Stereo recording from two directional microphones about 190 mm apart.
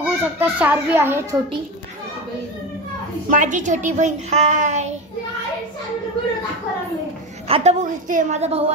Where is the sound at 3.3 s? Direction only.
40° right (ahead or behind).